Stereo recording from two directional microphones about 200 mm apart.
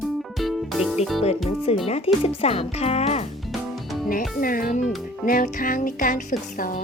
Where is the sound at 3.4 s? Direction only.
Centre (ahead or behind).